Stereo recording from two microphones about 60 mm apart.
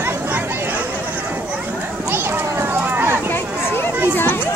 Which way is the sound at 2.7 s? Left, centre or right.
Right.